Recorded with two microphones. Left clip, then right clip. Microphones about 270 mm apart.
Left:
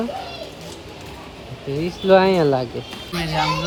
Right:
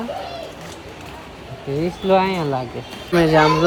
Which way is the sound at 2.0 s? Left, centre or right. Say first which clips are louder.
Left 4 dB; centre.